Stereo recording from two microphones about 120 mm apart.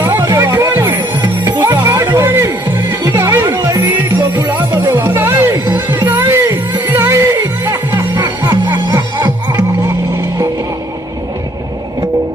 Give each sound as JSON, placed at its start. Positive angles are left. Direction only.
{"t": 0.0, "sound": "music", "side_deg": -25}
{"t": 1.2, "sound": "music", "side_deg": -35}
{"t": 1.6, "sound": "music", "side_deg": -20}